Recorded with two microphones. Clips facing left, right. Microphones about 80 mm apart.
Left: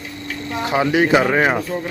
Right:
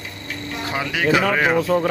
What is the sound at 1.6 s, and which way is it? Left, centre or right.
Speech, right.